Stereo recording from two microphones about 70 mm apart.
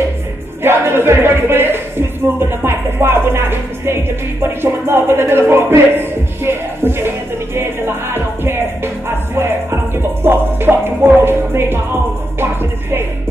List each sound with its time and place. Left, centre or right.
0.6 s music: right